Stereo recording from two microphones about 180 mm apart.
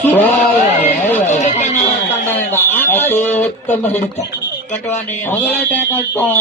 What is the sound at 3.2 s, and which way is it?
Speech, 10° left (ahead or behind).